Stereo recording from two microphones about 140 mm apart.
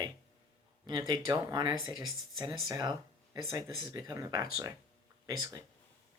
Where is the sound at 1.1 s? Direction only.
25° right (ahead or behind).